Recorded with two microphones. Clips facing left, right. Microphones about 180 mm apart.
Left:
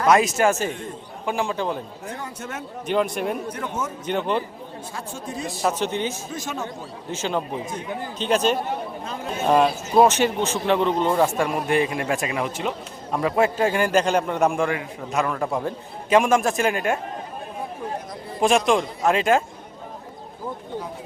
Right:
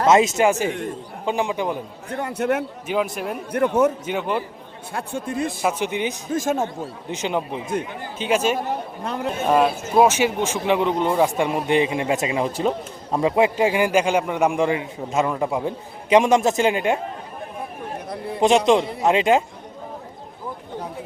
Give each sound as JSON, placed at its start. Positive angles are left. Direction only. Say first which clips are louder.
{"t": 0.0, "sound": "a man's voice", "louder": "right 2 dB", "side_deg": -25}
{"t": 2.0, "sound": "speech", "louder": "right 14 dB", "side_deg": -60}
{"t": 2.8, "sound": "speech", "louder": "left 1 dB", "side_deg": -5}
{"t": 3.5, "sound": "speech", "louder": "right 11 dB", "side_deg": -60}
{"t": 4.0, "sound": "a man's voice", "louder": "even", "side_deg": -5}
{"t": 4.9, "sound": "speech", "louder": "right 7 dB", "side_deg": -60}
{"t": 5.6, "sound": "a man's voice", "louder": "left 2 dB", "side_deg": -10}
{"t": 6.3, "sound": "a man's voice", "louder": "right 8 dB", "side_deg": -50}
{"t": 7.1, "sound": "a man's voice", "louder": "right 1 dB", "side_deg": -15}
{"t": 9.0, "sound": "speech", "louder": "right 6 dB", "side_deg": -65}
{"t": 9.5, "sound": "a man's voice", "louder": "even", "side_deg": -5}
{"t": 14.6, "sound": "a man's voice", "louder": "right 3 dB", "side_deg": -25}
{"t": 18.3, "sound": "a man's voice", "louder": "right 3 dB", "side_deg": -20}